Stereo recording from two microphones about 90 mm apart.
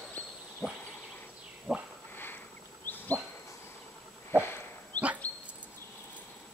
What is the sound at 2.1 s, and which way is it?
Sniff, 25° left (ahead or behind).